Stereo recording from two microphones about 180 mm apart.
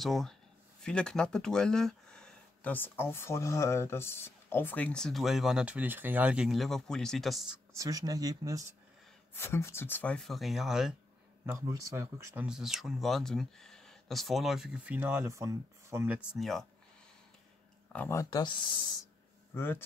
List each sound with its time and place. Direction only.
0.0 s speech: centre (ahead or behind)
7.7 s speech: 20° right (ahead or behind)
9.3 s speech: 15° left (ahead or behind); by 11.0 s centre (ahead or behind)
11.4 s speech: 15° right (ahead or behind)
12.4 s speech: centre (ahead or behind)
16.3 s speech: centre (ahead or behind)
17.9 s speech: 15° left (ahead or behind)
19.5 s speech: 10° left (ahead or behind)